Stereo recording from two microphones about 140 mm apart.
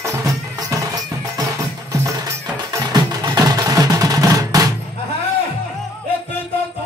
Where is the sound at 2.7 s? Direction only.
30° right (ahead or behind).